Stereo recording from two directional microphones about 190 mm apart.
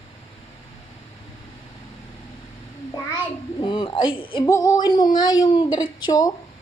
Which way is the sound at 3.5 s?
25° left (ahead or behind).